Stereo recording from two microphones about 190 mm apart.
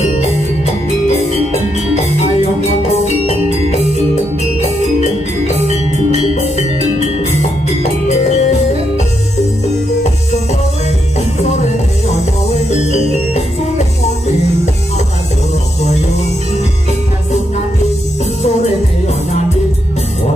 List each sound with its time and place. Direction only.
0.0 s music: 35° left (ahead or behind)
7.6 s music: 35° left (ahead or behind)
11.1 s music: 35° left (ahead or behind)